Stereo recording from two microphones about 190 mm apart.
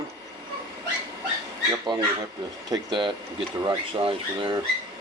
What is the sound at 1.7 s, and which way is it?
Speech, 25° right (ahead or behind).